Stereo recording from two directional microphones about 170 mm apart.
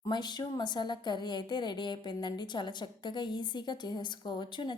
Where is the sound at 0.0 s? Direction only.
25° left (ahead or behind).